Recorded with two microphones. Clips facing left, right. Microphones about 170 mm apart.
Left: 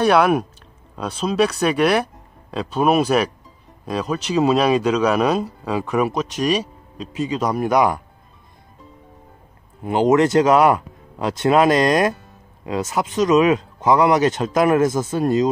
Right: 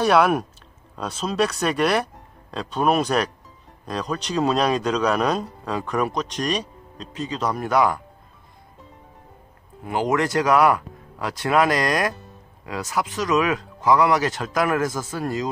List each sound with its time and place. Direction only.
0.0 s speech: centre (ahead or behind); by 8.0 s 15° left (ahead or behind)
9.8 s speech: 20° left (ahead or behind)